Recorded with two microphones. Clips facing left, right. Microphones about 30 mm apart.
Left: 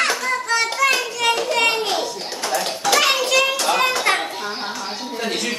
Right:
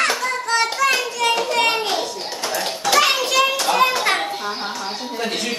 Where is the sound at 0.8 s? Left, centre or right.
Centre.